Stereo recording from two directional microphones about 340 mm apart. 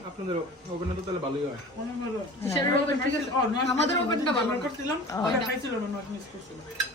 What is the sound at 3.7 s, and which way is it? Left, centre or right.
Speech, centre.